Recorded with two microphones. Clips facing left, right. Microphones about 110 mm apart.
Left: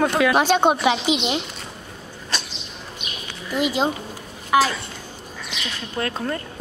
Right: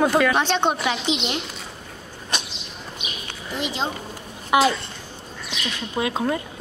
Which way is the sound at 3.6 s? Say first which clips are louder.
Left 5 dB; 10° left (ahead or behind).